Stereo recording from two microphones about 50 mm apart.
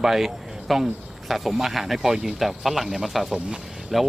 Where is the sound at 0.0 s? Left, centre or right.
Centre.